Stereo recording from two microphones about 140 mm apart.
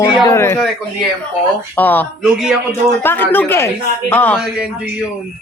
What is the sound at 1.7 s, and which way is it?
Speech, 15° left (ahead or behind).